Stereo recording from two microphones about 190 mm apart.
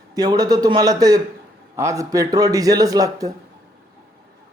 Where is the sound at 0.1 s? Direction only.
20° right (ahead or behind).